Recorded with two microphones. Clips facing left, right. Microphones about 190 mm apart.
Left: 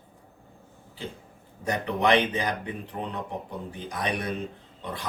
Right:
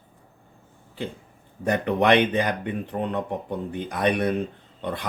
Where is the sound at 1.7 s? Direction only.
60° right (ahead or behind).